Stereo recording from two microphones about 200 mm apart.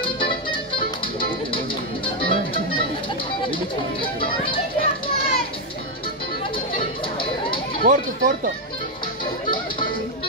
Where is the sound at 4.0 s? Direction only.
25° left (ahead or behind).